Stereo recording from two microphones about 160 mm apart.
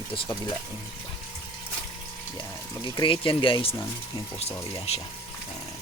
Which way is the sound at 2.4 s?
30° left (ahead or behind).